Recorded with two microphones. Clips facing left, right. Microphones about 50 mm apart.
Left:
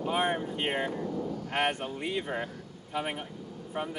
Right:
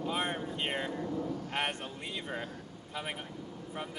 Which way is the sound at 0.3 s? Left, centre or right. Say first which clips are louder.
Left 5 dB; left.